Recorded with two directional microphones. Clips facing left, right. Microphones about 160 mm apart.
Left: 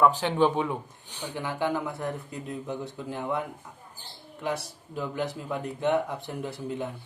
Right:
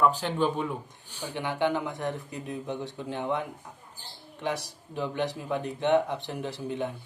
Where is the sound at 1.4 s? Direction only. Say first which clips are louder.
Right 1 dB; 20° right (ahead or behind).